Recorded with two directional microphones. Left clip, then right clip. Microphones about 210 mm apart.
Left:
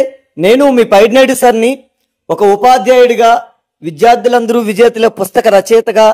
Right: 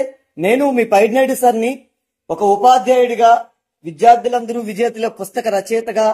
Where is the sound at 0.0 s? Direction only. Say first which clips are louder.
Left 8 dB; 55° left (ahead or behind).